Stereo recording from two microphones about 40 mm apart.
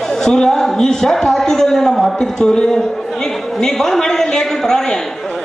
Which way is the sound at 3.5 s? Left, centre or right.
Centre.